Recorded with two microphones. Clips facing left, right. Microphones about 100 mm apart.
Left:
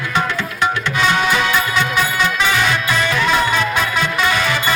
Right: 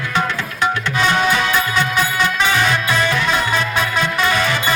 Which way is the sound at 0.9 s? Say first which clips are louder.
Right 1 dB; 30° right (ahead or behind).